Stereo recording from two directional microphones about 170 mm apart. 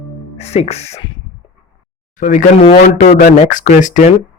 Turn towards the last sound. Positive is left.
turn(degrees=45)  # may be behind; listen again after turning